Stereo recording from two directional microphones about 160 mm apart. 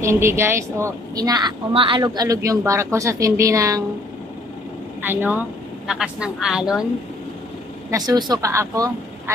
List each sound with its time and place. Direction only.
0.0 s a woman's voice: 15° right (ahead or behind)
5.0 s a woman's voice: 10° right (ahead or behind)
7.9 s a woman's voice: 25° right (ahead or behind)